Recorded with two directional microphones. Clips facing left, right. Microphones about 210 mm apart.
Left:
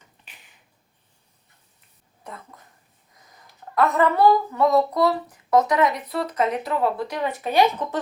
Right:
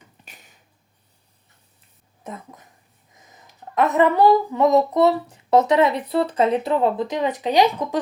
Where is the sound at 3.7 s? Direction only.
20° right (ahead or behind).